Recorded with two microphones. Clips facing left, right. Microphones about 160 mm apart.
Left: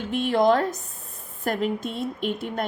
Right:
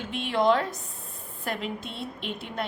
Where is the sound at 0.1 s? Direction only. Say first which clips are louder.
Left 4 dB; 45° left (ahead or behind).